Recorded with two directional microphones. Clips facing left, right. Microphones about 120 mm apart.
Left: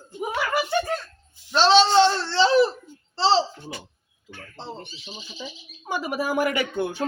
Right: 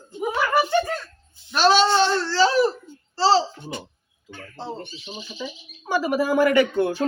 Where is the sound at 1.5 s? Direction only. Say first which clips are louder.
Left 1 dB; 25° left (ahead or behind).